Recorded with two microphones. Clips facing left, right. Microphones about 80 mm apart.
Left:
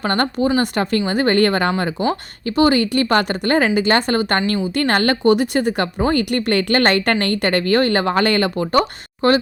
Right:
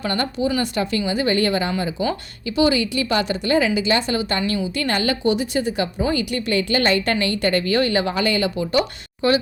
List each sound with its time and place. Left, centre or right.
0.0 s a woman's voice: left